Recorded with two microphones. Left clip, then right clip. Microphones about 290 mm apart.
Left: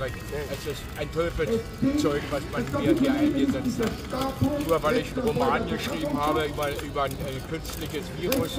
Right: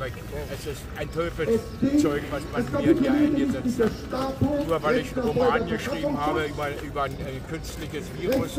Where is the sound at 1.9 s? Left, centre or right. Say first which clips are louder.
Right 3 dB; centre.